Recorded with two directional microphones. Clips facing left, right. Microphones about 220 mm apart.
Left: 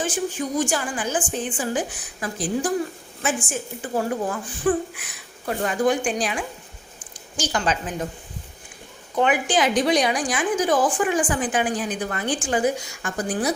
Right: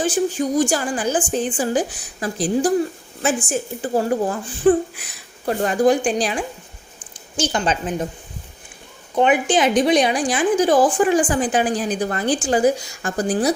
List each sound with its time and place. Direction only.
0.0 s a woman's voice: 35° right (ahead or behind)
7.3 s a woman's voice: 25° right (ahead or behind)
9.1 s a woman's voice: 20° right (ahead or behind)